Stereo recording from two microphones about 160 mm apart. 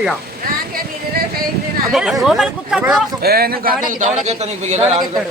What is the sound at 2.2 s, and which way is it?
Speech, 5° right (ahead or behind).